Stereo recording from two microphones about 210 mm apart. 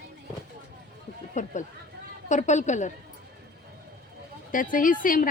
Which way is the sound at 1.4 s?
35° left (ahead or behind).